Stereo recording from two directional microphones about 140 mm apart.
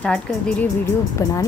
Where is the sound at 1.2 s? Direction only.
25° left (ahead or behind).